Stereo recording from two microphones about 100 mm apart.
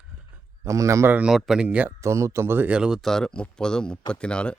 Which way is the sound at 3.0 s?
5° left (ahead or behind).